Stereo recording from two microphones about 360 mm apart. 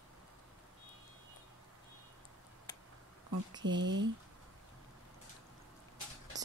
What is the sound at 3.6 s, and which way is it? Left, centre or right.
Speech, right.